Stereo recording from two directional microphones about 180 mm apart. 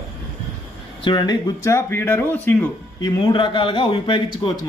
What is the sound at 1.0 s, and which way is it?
Speech, 20° left (ahead or behind).